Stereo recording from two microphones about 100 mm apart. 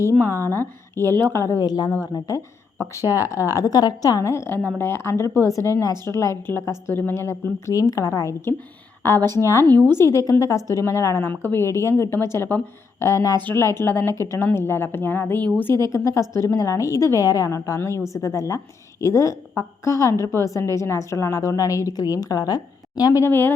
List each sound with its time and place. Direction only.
0.2 s a woman's voice: 25° left (ahead or behind)
1.6 s a woman's voice: 40° left (ahead or behind)
3.0 s speech: 20° right (ahead or behind)
3.5 s a woman's voice: 35° left (ahead or behind)
9.7 s a woman's voice: 45° right (ahead or behind)
10.0 s a woman's voice: 30° left (ahead or behind)
23.2 s a woman's voice: 20° left (ahead or behind)